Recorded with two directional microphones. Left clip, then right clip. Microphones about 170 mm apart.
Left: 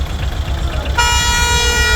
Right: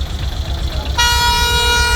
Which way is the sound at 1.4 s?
5° left (ahead or behind).